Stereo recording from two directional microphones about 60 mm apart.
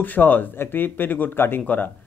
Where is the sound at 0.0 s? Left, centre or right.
Left.